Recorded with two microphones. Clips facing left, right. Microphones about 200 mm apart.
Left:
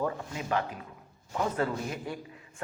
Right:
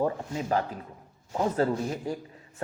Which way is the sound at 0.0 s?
35° right (ahead or behind).